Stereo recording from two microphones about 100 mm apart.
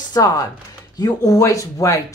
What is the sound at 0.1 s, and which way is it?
Speech, 35° left (ahead or behind).